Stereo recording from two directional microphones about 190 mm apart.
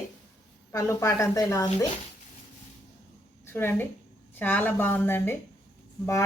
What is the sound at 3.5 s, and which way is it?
Speech, 10° left (ahead or behind).